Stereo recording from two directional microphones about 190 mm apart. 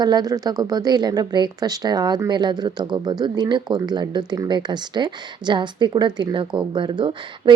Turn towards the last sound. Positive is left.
turn(degrees=-25)  # may be behind; listen again after turning